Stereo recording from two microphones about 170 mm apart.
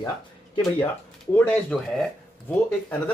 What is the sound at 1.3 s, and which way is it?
Speech, 5° left (ahead or behind).